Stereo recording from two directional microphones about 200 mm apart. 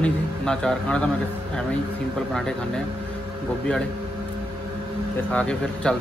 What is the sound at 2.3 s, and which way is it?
Speech, 5° left (ahead or behind).